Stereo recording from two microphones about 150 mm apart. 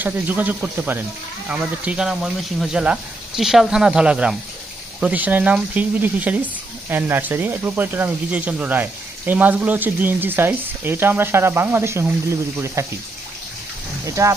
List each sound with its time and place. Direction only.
0.0 s speech: 10° right (ahead or behind)
14.0 s speech: 20° right (ahead or behind)